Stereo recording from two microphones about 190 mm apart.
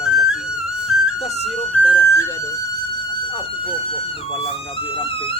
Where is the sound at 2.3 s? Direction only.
20° left (ahead or behind).